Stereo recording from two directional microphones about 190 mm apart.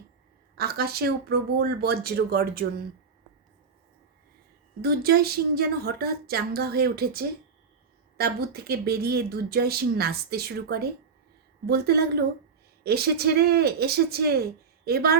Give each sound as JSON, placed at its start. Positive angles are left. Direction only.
{"t": 0.5, "sound": "speech", "side_deg": -55}
{"t": 4.8, "sound": "speech", "side_deg": -55}